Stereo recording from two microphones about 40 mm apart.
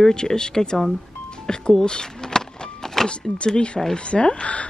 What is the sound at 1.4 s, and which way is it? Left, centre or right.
Power windows, centre.